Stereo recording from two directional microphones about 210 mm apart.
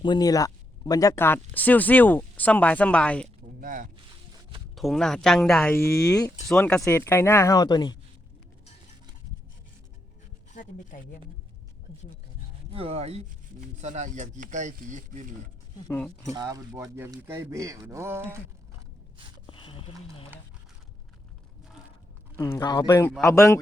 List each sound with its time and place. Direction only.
0.0 s speech: 20° left (ahead or behind)
3.6 s speech: 40° right (ahead or behind)
4.7 s speech: centre (ahead or behind); by 6.3 s 15° left (ahead or behind)
6.5 s speech: 5° left (ahead or behind); by 7.9 s 20° left (ahead or behind)
10.5 s speech: 40° left (ahead or behind)
12.7 s speech: 30° right (ahead or behind)
15.9 s speech: 5° left (ahead or behind)
16.3 s speech: 15° right (ahead or behind)
19.5 s a sound: 25° left (ahead or behind)
22.4 s speech: 15° left (ahead or behind)